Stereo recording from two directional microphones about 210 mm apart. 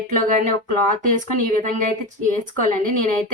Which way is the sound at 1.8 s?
40° right (ahead or behind).